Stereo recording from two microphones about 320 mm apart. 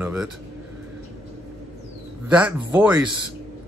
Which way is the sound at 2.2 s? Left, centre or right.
Centre.